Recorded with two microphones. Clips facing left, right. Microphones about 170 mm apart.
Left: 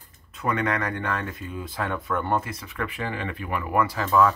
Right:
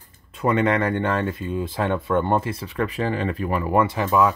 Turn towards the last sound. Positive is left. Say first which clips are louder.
# right 1 dB
turn(degrees=-15)  # may be behind; listen again after turning